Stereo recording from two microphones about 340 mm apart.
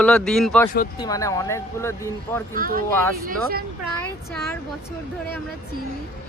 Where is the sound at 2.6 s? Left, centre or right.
Right.